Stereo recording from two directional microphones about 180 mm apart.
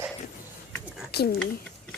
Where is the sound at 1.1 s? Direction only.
60° left (ahead or behind).